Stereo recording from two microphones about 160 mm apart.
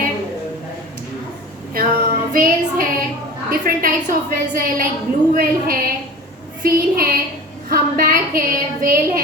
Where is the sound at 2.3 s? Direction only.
60° right (ahead or behind).